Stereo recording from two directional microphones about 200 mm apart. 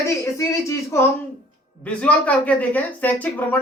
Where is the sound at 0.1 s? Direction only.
15° left (ahead or behind).